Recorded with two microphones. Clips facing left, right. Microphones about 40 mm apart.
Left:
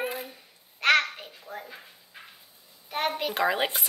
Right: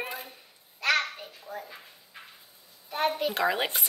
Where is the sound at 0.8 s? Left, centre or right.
Left.